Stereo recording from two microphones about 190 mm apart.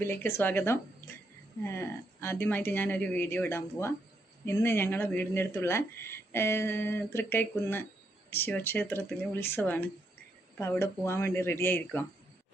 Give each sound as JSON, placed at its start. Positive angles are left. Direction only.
{"t": 0.0, "sound": "speech", "side_deg": 10}